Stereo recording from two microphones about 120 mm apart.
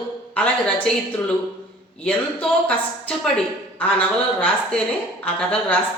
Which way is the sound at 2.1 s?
10° left (ahead or behind).